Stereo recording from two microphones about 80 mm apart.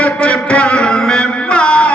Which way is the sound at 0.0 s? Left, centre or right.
Centre.